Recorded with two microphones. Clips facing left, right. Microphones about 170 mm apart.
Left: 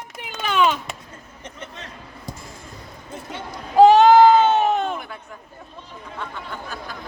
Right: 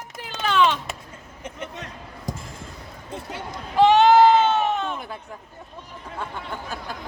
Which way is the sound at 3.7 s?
40° left (ahead or behind).